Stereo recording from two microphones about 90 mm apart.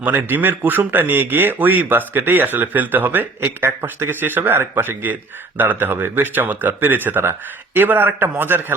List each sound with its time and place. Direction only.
0.0 s speech: 20° right (ahead or behind)